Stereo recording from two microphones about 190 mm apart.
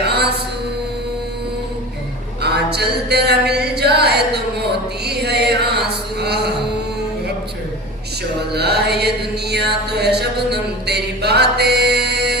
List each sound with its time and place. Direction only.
0.0 s mantra: 60° right (ahead or behind)
2.4 s a sound: 60° right (ahead or behind)
4.6 s chant: 60° right (ahead or behind)
8.5 s mantra: 60° right (ahead or behind)